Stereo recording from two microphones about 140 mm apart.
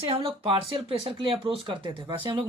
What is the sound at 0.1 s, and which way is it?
Speech, 40° right (ahead or behind).